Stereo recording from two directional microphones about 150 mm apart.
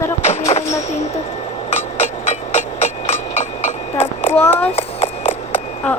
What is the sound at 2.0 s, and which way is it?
Hammer, 50° left (ahead or behind).